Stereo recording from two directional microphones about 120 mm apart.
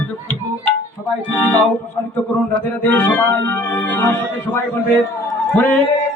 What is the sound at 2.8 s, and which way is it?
Music, 15° left (ahead or behind).